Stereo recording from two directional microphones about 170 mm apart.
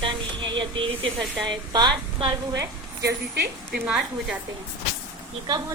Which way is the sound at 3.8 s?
5° right (ahead or behind).